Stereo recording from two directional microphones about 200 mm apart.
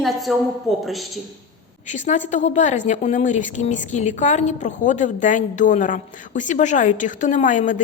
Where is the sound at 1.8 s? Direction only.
35° left (ahead or behind).